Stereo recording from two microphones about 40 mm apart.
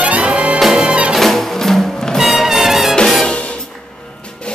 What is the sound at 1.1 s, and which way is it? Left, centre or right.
Music, centre.